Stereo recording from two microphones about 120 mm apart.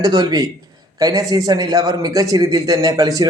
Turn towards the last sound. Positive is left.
turn(degrees=-30)  # may be behind; listen again after turning